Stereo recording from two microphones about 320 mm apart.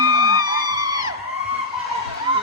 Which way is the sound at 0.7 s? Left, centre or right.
Centre.